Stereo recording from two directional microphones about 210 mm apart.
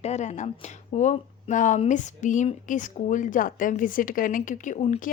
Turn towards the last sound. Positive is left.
turn(degrees=35)  # may be behind; listen again after turning